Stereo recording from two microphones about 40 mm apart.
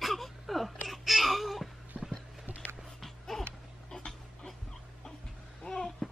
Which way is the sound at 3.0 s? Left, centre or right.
Centre.